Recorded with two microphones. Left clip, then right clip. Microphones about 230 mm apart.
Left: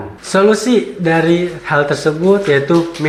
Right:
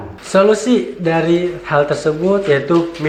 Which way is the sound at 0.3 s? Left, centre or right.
Left.